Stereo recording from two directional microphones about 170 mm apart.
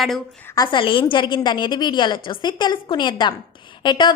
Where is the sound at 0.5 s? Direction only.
25° left (ahead or behind).